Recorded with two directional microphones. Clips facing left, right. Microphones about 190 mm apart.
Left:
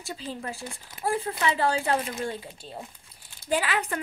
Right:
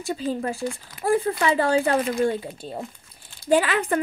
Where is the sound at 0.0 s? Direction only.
50° right (ahead or behind).